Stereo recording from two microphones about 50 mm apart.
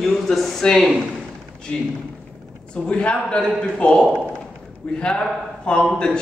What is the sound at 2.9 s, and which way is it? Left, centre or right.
A man's voice, left.